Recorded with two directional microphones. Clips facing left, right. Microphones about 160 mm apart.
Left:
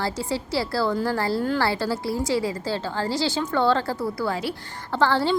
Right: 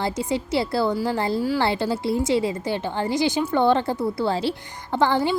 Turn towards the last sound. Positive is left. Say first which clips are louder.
# right 1 dB
turn(degrees=-15)  # may be behind; listen again after turning